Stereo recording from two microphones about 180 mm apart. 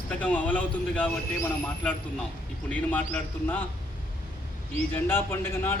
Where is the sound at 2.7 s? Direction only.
10° left (ahead or behind).